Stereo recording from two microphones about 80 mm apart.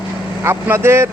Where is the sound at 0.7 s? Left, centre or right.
Right.